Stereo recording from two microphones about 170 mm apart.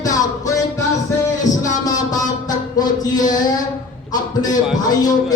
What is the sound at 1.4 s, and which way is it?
Mantra, 20° left (ahead or behind).